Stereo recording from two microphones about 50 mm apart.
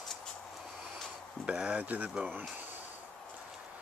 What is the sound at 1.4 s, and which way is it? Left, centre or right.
Speech, right.